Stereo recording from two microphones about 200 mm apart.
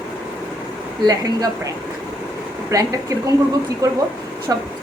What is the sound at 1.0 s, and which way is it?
Speech, 20° right (ahead or behind).